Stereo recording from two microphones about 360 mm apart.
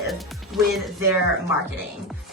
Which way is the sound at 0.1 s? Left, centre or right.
Centre.